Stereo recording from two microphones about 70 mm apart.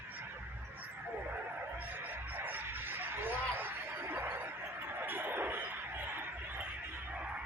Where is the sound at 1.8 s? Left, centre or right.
Right.